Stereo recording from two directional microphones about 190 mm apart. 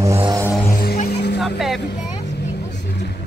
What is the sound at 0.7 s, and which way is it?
Music, 45° left (ahead or behind).